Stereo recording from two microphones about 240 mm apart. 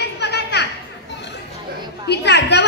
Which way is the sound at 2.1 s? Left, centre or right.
Left.